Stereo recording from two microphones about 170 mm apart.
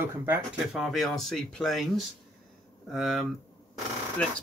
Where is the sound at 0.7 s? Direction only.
Centre (ahead or behind).